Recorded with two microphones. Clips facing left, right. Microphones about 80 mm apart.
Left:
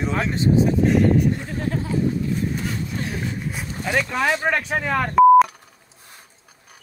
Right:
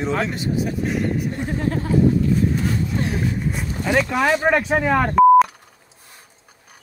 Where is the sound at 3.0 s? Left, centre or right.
Right.